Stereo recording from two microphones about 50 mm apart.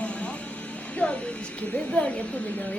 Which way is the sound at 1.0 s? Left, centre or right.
Left.